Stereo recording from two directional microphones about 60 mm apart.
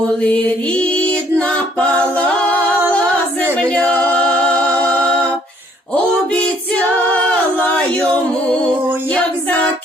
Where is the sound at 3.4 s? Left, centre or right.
Left.